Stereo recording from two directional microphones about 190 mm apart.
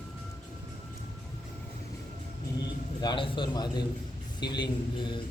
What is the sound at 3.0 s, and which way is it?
Mantra, 25° left (ahead or behind).